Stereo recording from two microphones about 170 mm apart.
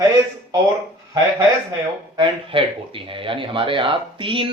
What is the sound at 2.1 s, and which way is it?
Speech, 30° right (ahead or behind).